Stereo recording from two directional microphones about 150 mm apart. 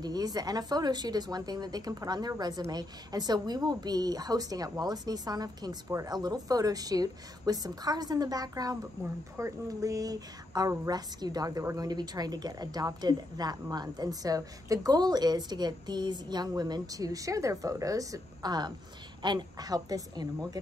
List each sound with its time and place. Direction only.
0.0 s a woman's voice: 25° right (ahead or behind)